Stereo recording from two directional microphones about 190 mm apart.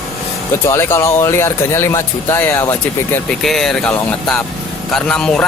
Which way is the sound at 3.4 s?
Centre (ahead or behind).